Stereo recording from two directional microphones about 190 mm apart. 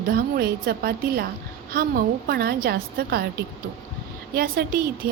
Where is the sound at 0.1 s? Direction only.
55° right (ahead or behind).